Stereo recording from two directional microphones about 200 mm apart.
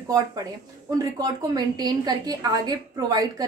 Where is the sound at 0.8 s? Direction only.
20° right (ahead or behind).